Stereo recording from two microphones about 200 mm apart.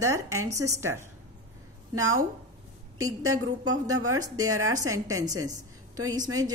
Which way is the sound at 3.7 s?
90° right.